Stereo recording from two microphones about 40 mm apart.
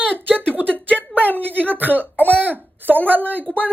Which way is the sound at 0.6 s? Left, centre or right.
Left.